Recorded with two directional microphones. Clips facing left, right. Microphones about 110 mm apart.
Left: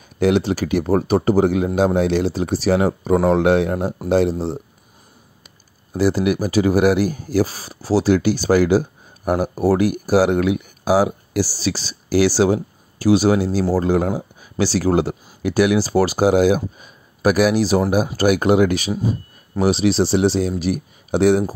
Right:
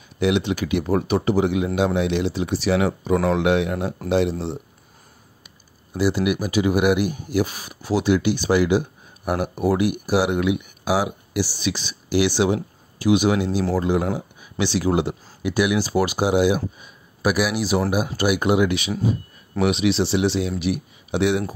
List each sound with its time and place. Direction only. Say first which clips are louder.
0.2 s speech: left 4 dB; 40° left (ahead or behind)
5.9 s speech: left 3 dB; 40° left (ahead or behind)